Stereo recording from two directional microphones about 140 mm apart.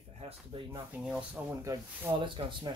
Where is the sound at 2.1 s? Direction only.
35° right (ahead or behind).